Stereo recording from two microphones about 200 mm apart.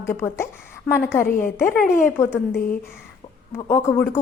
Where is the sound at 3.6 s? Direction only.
15° left (ahead or behind).